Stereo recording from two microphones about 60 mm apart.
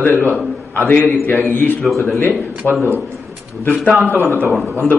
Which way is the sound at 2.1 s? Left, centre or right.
Left.